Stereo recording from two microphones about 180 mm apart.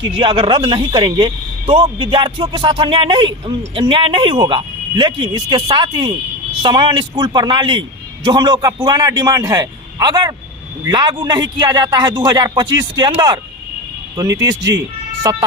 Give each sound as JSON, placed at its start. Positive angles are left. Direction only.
{"t": 0.2, "sound": "a man's voice", "side_deg": -30}